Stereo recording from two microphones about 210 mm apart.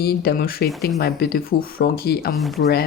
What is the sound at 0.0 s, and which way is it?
Speech, 45° left (ahead or behind).